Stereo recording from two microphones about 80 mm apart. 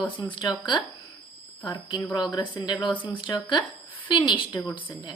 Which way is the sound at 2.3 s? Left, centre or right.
Left.